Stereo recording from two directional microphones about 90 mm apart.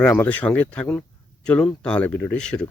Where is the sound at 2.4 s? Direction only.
10° left (ahead or behind).